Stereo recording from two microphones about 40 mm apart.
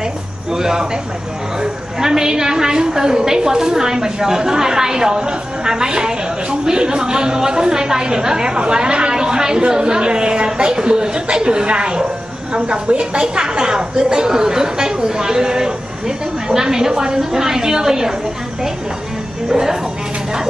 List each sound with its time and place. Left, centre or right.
0.5 s a woman's voice: centre
19.5 s a woman's voice: centre